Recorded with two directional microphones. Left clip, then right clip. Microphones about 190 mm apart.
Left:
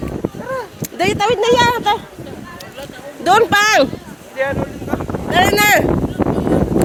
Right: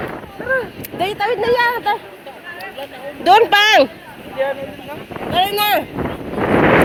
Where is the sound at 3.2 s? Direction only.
20° left (ahead or behind).